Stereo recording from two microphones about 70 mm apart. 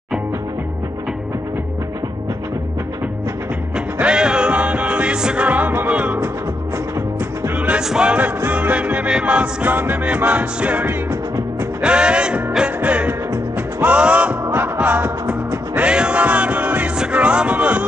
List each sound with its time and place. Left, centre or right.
3.7 s music: centre
7.5 s music: centre
8.4 s music: right
13.9 s music: centre